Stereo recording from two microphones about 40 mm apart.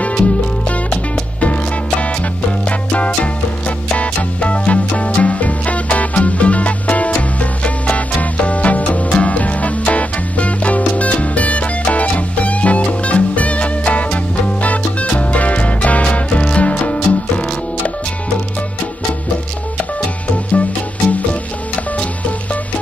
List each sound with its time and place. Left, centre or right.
0.1 s music: left